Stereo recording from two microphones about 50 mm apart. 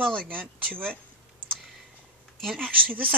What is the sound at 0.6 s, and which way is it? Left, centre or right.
Speech, right.